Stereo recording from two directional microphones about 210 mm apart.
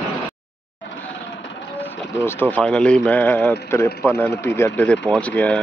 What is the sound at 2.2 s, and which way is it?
Speech, 10° left (ahead or behind).